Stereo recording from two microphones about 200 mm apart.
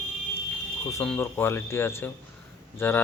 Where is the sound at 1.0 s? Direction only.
5° left (ahead or behind).